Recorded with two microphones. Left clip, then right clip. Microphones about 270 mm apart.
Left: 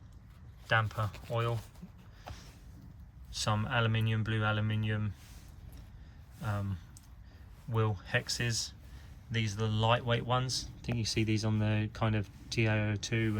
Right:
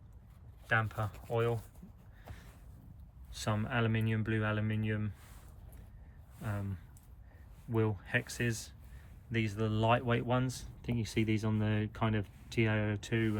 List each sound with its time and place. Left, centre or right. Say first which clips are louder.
0.7 s speech: left 2 dB; centre
3.3 s speech: left 3 dB; centre
6.4 s speech: left 3 dB; centre
7.7 s speech: even; centre